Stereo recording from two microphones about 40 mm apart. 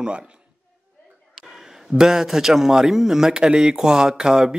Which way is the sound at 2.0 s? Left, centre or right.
Centre.